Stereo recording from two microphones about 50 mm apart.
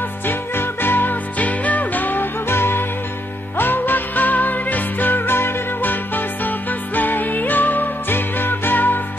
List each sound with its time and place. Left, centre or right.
0.3 s music: left
1.4 s music: left
2.5 s music: left